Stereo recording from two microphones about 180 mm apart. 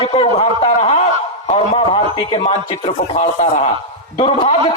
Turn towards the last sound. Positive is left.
turn(degrees=30)  # may be behind; listen again after turning